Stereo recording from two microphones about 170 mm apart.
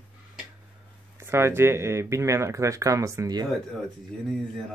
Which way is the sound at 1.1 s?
15° right (ahead or behind).